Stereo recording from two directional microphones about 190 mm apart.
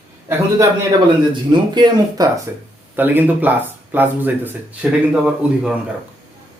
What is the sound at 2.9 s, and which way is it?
A man's voice, 10° right (ahead or behind).